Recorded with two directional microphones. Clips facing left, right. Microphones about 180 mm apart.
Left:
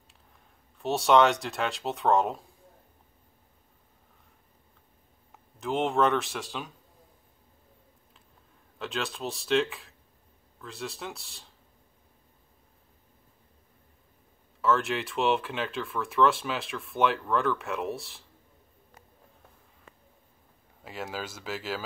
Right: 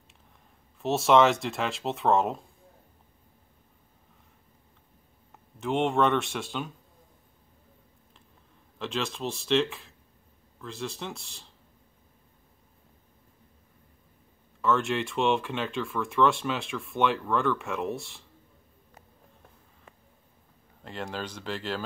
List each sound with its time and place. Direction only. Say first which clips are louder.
0.7 s speech: right 1 dB; centre (ahead or behind)
5.6 s speech: right 1 dB; centre (ahead or behind)
8.7 s speech: right 2 dB; centre (ahead or behind)
14.6 s speech: even; centre (ahead or behind)
20.8 s speech: right 1 dB; 5° left (ahead or behind)